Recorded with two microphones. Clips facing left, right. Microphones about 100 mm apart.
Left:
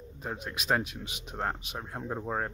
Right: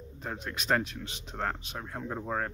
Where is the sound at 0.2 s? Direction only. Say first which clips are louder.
Even; 15° left (ahead or behind).